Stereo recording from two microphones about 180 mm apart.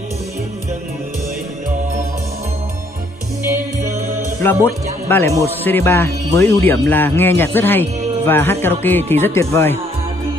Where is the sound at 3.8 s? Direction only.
15° right (ahead or behind).